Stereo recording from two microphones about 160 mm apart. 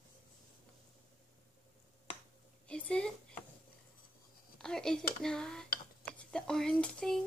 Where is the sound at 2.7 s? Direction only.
5° left (ahead or behind).